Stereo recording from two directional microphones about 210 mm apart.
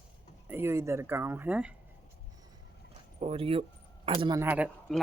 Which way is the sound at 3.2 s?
25° right (ahead or behind).